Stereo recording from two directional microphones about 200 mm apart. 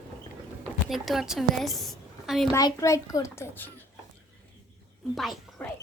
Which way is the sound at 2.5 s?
15° left (ahead or behind).